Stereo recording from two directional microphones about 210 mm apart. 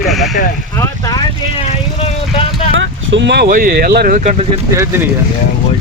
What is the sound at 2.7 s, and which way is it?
Speech, 60° right (ahead or behind).